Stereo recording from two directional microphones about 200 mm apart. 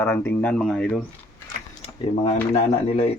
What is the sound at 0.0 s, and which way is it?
Speech, 10° left (ahead or behind).